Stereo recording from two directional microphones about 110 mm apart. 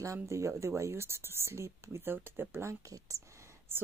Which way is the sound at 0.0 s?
30° right (ahead or behind).